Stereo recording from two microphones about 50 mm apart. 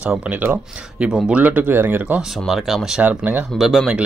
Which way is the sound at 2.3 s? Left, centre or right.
Centre.